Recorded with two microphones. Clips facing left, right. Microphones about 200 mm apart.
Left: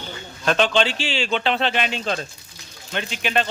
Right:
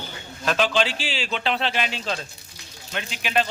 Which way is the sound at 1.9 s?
55° left (ahead or behind).